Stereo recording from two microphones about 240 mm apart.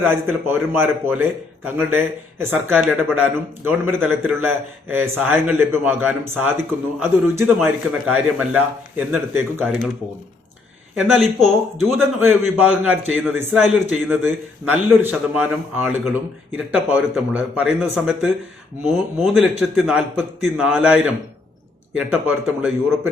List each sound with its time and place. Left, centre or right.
0.0 s a man's voice: centre
10.9 s a man's voice: centre